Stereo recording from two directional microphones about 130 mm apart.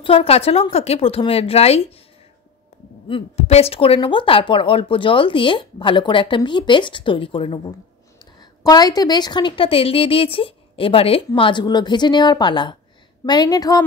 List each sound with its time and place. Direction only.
0.0 s a woman's voice: 45° left (ahead or behind)
3.1 s a woman's voice: 45° left (ahead or behind); by 13.8 s 30° left (ahead or behind)